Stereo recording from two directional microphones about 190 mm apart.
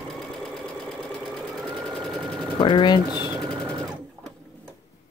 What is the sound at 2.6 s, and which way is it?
Speech, 25° left (ahead or behind).